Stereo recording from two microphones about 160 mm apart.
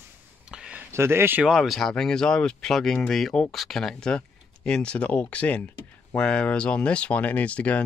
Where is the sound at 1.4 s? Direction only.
Centre (ahead or behind).